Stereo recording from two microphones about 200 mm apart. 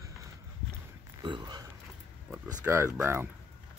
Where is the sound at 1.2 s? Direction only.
20° right (ahead or behind).